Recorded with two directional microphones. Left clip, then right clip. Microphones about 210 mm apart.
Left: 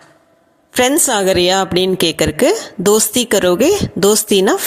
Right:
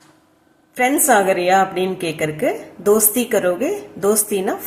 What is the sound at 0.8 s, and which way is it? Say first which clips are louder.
A woman's voice: left 1 dB; 45° left (ahead or behind).